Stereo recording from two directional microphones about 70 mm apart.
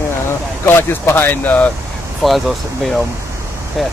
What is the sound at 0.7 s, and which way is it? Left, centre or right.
Speech, left.